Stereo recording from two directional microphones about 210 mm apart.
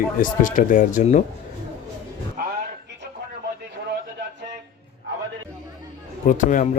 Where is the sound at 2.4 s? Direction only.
40° right (ahead or behind).